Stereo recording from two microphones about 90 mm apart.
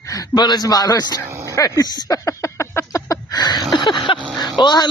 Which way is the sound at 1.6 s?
40° left (ahead or behind).